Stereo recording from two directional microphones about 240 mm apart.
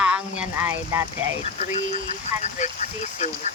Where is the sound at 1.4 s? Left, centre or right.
Left.